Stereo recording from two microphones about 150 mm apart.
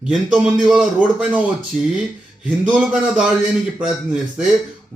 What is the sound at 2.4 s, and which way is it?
Speech, 5° right (ahead or behind).